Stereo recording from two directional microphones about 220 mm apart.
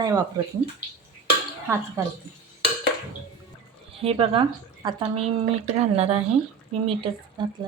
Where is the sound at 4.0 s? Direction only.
25° right (ahead or behind).